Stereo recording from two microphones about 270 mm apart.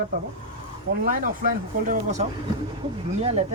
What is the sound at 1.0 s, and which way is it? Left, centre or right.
Speech, right.